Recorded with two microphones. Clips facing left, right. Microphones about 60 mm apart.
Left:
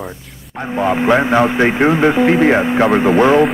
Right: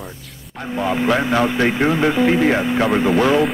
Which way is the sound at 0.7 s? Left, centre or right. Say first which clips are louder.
Left 5 dB; left.